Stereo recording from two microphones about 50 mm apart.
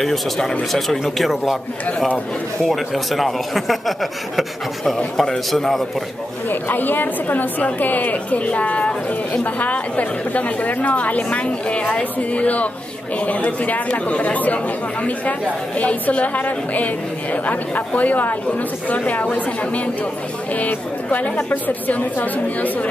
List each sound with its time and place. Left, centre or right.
0.0 s speech: centre
2.7 s speech: centre
4.9 s a man's voice: centre
6.5 s a woman's voice: left
15.8 s a woman's voice: left